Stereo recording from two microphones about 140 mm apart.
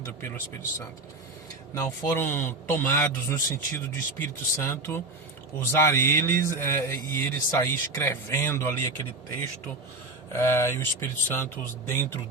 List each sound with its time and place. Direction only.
1.7 s a man's voice: 20° left (ahead or behind)
10.3 s a man's voice: 20° left (ahead or behind)